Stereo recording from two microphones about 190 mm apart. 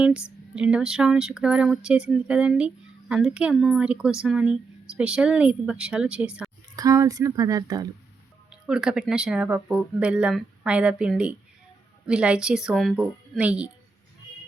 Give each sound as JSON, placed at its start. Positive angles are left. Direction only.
{"t": 0.3, "sound": "speech", "side_deg": -5}
{"t": 6.7, "sound": "speech", "side_deg": -20}
{"t": 8.4, "sound": "speech", "side_deg": -5}